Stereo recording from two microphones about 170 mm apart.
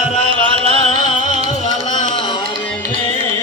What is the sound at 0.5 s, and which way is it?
Music, 35° right (ahead or behind).